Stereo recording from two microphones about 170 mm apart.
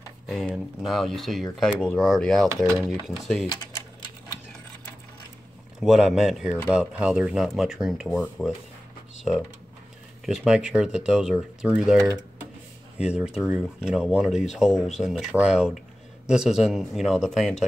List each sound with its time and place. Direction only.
0.3 s speech: centre (ahead or behind)
2.4 s speech: 20° right (ahead or behind)
3.1 s speech: centre (ahead or behind)
5.8 s speech: 5° right (ahead or behind)
10.2 s speech: 5° right (ahead or behind)